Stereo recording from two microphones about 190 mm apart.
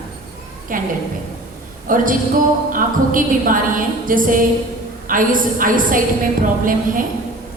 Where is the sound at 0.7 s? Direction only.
45° right (ahead or behind).